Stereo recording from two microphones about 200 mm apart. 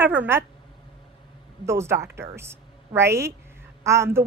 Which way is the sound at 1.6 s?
15° right (ahead or behind).